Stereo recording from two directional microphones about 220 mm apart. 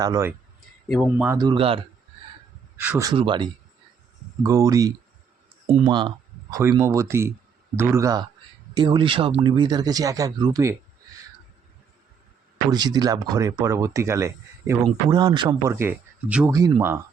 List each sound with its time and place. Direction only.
0.0 s speech: 15° right (ahead or behind)
2.7 s speech: 10° right (ahead or behind)
3.1 s speech: 20° right (ahead or behind)
12.7 s speech: 20° right (ahead or behind)